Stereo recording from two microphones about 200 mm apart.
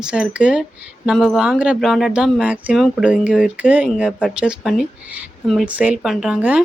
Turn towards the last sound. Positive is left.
turn(degrees=-5)  # may be behind; listen again after turning